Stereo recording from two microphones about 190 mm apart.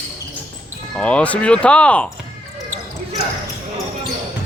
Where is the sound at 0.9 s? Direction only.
5° left (ahead or behind).